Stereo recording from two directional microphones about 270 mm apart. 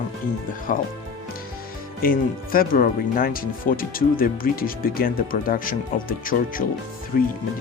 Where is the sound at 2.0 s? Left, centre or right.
Left.